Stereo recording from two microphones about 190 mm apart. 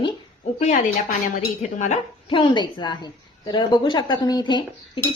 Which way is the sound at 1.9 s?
25° left (ahead or behind).